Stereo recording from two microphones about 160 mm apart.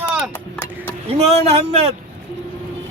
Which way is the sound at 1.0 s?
40° right (ahead or behind).